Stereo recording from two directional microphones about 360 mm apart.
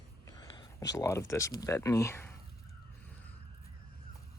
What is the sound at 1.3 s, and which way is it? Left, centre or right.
Speech, centre.